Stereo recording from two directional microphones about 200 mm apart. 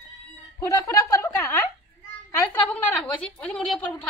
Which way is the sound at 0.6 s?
15° left (ahead or behind).